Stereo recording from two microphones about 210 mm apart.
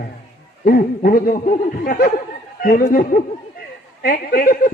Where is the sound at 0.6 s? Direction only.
40° left (ahead or behind).